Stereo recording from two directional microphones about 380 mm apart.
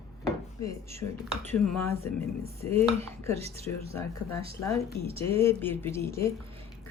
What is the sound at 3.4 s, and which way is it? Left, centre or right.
Speech, centre.